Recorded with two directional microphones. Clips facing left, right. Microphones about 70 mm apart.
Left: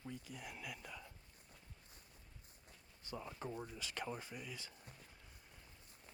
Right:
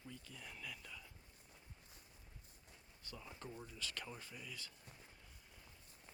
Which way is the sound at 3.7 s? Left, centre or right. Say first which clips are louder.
Left 4 dB; centre.